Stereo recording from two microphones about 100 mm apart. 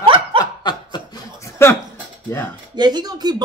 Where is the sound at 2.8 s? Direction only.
45° right (ahead or behind).